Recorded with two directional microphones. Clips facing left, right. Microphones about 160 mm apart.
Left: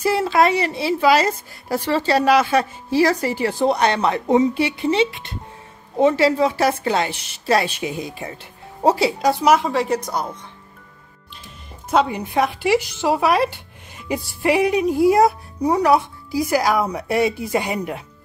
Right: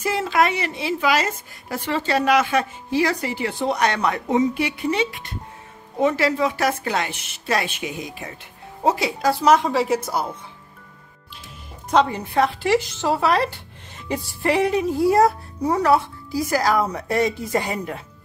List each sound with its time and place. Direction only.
0.0 s a woman's voice: 35° left (ahead or behind)
9.2 s a woman's voice: 20° left (ahead or behind)
9.5 s speech: centre (ahead or behind)
11.9 s speech: 10° left (ahead or behind)